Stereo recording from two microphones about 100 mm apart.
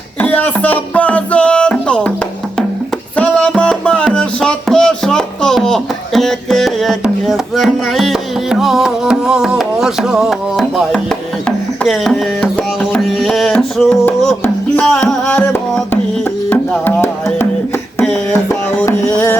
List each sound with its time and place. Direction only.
0.2 s music: 20° left (ahead or behind)
3.2 s music: 15° left (ahead or behind)
15.0 s music: 15° left (ahead or behind)
19.1 s music: 20° left (ahead or behind)